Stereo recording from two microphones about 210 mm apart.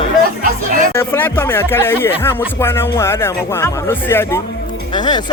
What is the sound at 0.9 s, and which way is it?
Speech, 10° left (ahead or behind).